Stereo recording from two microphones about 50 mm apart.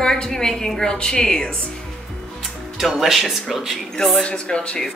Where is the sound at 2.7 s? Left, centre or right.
Centre.